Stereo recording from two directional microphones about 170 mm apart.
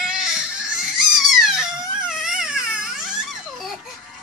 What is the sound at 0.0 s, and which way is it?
Baby cry, 5° right (ahead or behind).